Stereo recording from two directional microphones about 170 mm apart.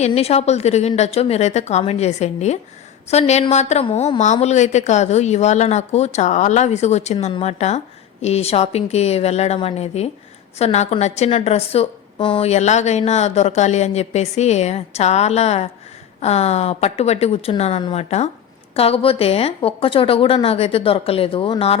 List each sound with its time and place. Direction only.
0.0 s a woman's voice: 35° left (ahead or behind)